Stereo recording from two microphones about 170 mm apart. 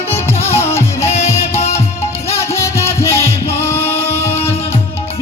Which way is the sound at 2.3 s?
15° left (ahead or behind).